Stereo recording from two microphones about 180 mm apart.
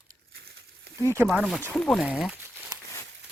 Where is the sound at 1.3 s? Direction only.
Centre (ahead or behind).